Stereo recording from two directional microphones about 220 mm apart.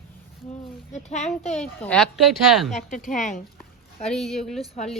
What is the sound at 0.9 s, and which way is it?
Speech, 30° left (ahead or behind).